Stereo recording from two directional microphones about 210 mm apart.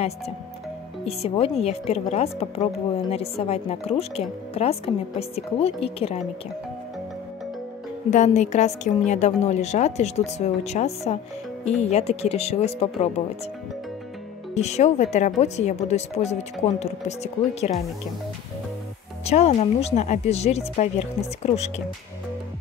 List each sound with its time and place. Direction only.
1.0 s a woman's voice: 30° left (ahead or behind)
8.1 s a woman's voice: 35° left (ahead or behind)
14.5 s a woman's voice: 30° left (ahead or behind)
19.2 s a woman's voice: 30° left (ahead or behind)